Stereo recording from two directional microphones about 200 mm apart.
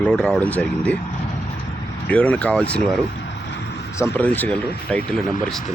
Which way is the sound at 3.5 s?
60° left (ahead or behind).